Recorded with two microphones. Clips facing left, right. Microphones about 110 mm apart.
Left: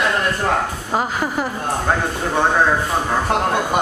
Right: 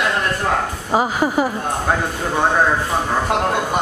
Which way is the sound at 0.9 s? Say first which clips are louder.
Right 4 dB; 5° right (ahead or behind).